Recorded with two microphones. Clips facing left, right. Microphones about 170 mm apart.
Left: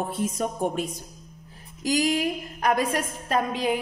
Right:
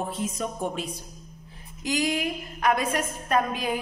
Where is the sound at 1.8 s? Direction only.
40° left (ahead or behind).